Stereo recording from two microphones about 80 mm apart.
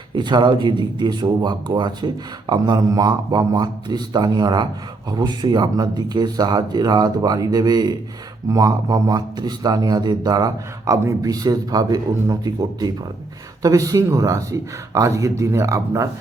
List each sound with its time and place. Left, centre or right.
0.1 s a man's voice: right